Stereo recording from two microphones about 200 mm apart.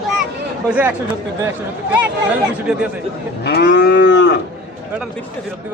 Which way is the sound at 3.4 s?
55° left (ahead or behind).